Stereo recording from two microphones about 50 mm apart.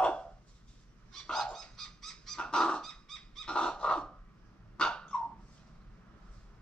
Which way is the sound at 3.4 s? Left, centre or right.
Centre.